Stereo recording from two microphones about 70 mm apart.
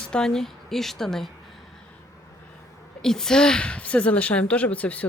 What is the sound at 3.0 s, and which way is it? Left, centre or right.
A woman's voice, centre.